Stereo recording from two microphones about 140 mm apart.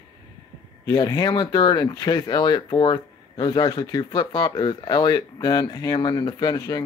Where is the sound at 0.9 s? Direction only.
25° left (ahead or behind).